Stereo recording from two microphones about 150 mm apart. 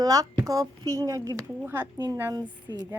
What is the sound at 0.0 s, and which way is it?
A woman's voice, 25° right (ahead or behind).